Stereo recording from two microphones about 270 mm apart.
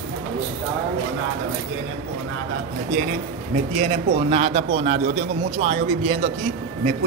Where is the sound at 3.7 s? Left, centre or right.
Right.